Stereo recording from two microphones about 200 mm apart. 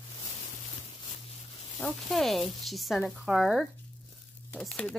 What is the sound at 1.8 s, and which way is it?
Speech, centre (ahead or behind).